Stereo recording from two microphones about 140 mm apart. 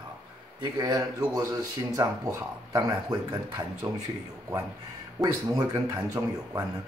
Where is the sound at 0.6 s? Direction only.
30° right (ahead or behind).